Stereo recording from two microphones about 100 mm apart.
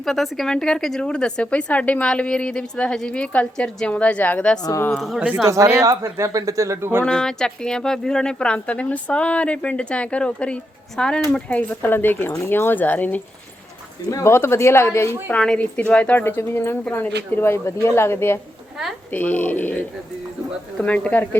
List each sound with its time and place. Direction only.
0.0 s speech: centre (ahead or behind)
4.9 s speech: centre (ahead or behind)
5.7 s speech: 35° right (ahead or behind)
7.0 s speech: 5° left (ahead or behind)
14.1 s a woman's voice: 30° left (ahead or behind)
15.3 s a woman's voice: 10° left (ahead or behind)
20.8 s speech: 15° left (ahead or behind)